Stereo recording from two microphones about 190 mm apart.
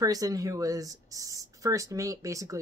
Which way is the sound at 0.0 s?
20° right (ahead or behind).